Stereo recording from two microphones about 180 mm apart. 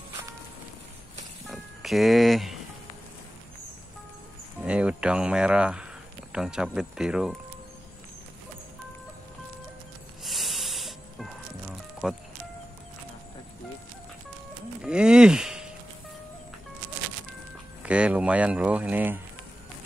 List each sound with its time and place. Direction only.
1.5 s music: centre (ahead or behind)
4.6 s speech: 5° right (ahead or behind)
10.2 s music: centre (ahead or behind)
12.0 s speech: 5° right (ahead or behind)
14.8 s a sound: 5° right (ahead or behind)
17.8 s speech: 5° right (ahead or behind)